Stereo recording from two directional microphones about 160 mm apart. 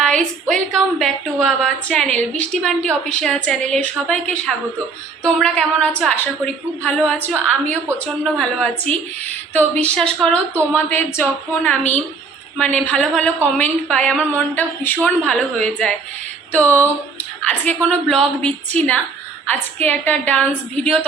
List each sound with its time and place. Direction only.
0.0 s a woman's voice: 5° left (ahead or behind)
17.8 s a woman's voice: 5° left (ahead or behind)